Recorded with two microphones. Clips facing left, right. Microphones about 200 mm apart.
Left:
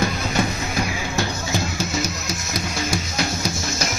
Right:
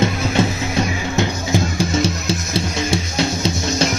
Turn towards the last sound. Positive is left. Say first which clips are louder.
# right 6 dB
turn(degrees=-25)  # may be behind; listen again after turning